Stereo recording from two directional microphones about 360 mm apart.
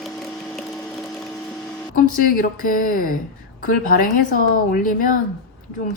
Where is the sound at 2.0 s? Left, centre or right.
Left.